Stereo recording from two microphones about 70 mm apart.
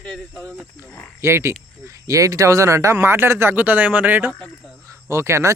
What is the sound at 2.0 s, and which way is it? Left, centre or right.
Speech, right.